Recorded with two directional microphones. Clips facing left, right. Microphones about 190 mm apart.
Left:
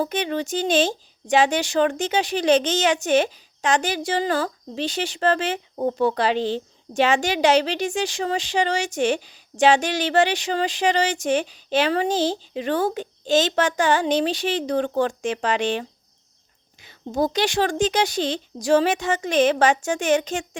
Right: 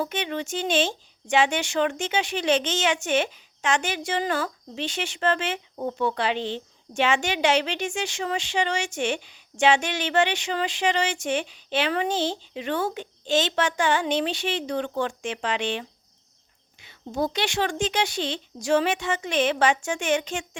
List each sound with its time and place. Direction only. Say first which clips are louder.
0.0 s speech: left 4 dB; 40° left (ahead or behind)